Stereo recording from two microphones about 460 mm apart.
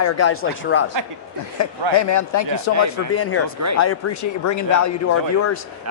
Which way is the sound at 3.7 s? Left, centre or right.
Left.